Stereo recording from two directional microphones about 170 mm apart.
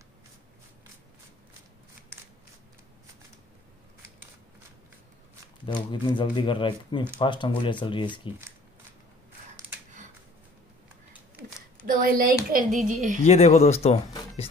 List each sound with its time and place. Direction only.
5.7 s speech: 25° left (ahead or behind)
11.8 s speech: 55° right (ahead or behind)
13.2 s speech: 40° left (ahead or behind)